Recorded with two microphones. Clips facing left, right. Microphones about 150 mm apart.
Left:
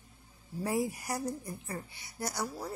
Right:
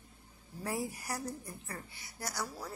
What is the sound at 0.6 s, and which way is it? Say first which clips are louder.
A woman's voice: left 5 dB; 15° left (ahead or behind).